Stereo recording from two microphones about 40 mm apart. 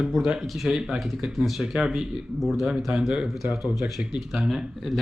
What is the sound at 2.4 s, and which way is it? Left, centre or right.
Speech, centre.